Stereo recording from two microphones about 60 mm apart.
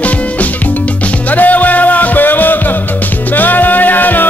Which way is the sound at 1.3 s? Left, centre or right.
Left.